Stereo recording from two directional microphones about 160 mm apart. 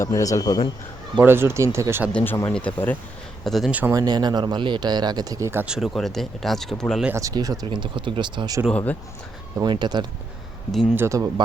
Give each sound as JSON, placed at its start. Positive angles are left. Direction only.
{"t": 0.0, "sound": "speech", "side_deg": 20}
{"t": 1.2, "sound": "speech", "side_deg": -15}
{"t": 2.1, "sound": "speech", "side_deg": 15}
{"t": 3.4, "sound": "speech", "side_deg": 0}
{"t": 3.9, "sound": "speech", "side_deg": -25}
{"t": 7.1, "sound": "speech", "side_deg": -20}
{"t": 8.7, "sound": "speech", "side_deg": 10}
{"t": 9.6, "sound": "speech", "side_deg": -25}
{"t": 10.7, "sound": "speech", "side_deg": 0}
{"t": 10.9, "sound": "speech", "side_deg": -15}